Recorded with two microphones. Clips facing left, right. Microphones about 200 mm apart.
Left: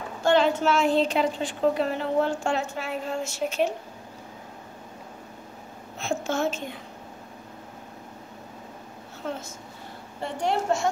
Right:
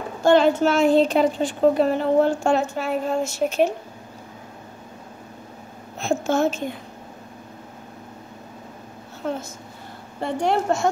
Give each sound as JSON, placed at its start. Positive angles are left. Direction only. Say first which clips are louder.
{"t": 0.2, "sound": "a woman's voice", "louder": "right 5 dB", "side_deg": -45}
{"t": 5.9, "sound": "a sound", "louder": "right 6 dB", "side_deg": -45}
{"t": 9.2, "sound": "a woman's voice", "louder": "right 5 dB", "side_deg": -50}